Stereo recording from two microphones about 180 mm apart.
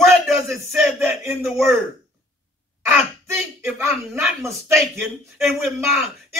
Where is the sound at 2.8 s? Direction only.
15° right (ahead or behind).